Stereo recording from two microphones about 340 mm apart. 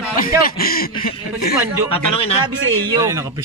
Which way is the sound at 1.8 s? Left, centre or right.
Centre.